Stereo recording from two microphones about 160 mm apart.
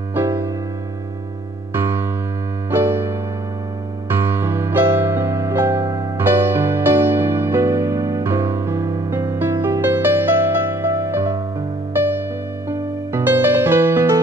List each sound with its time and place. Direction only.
0.1 s music: 15° right (ahead or behind)
1.7 s music: 15° right (ahead or behind)
12.6 s music: 15° right (ahead or behind)